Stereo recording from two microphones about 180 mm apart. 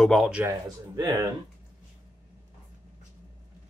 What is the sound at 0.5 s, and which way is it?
Speech, 20° right (ahead or behind).